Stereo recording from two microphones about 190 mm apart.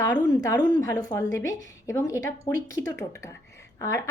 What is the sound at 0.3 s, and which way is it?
A woman's voice, 20° left (ahead or behind).